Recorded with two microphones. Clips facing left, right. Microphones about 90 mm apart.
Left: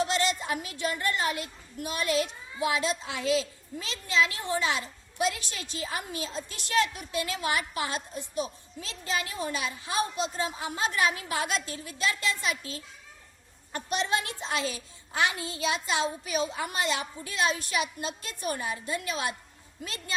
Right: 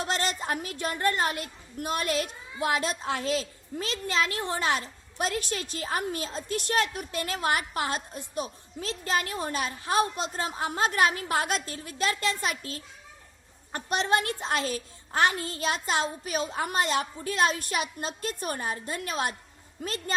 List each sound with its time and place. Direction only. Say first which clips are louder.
0.1 s a woman's voice: left 1 dB; 45° right (ahead or behind)